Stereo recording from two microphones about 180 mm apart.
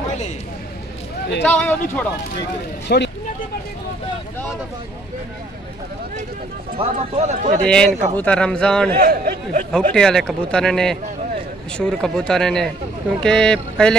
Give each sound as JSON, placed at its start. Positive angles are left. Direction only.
{"t": 1.4, "sound": "speech", "side_deg": 10}
{"t": 2.9, "sound": "speech", "side_deg": 60}
{"t": 6.8, "sound": "speech", "side_deg": -40}
{"t": 7.6, "sound": "a man's voice", "side_deg": 5}
{"t": 8.9, "sound": "speech", "side_deg": -55}
{"t": 9.7, "sound": "a man's voice", "side_deg": 5}